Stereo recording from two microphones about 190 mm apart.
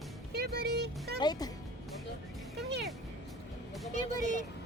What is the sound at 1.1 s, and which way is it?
Speech, 20° left (ahead or behind).